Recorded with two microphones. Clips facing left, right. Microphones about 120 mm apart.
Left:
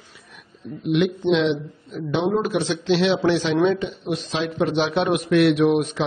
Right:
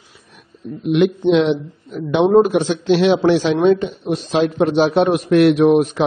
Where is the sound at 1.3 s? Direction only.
50° right (ahead or behind).